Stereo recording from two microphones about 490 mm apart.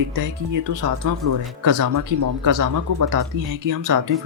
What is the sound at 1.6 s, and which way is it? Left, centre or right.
Speech, right.